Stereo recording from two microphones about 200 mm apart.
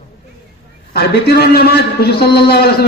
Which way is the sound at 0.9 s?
55° left (ahead or behind).